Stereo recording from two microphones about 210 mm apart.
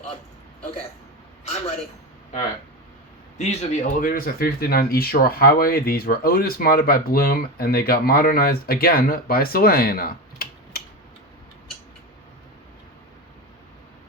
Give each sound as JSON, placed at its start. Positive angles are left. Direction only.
{"t": 3.3, "sound": "speech", "side_deg": 35}